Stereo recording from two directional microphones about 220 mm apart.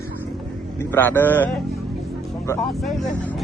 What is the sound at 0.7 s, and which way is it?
Speech, 10° left (ahead or behind).